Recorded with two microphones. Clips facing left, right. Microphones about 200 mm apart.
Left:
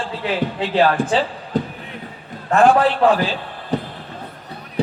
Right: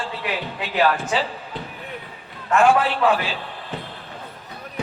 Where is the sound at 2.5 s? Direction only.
35° left (ahead or behind).